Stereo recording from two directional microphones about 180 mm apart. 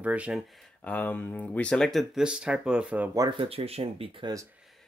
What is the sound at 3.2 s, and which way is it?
Speech, 30° right (ahead or behind).